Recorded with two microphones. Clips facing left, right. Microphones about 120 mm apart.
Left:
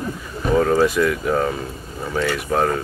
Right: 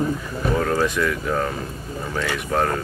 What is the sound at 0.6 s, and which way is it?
A man's voice, 5° left (ahead or behind).